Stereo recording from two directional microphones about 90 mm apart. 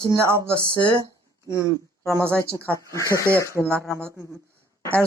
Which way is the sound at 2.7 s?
35° left (ahead or behind).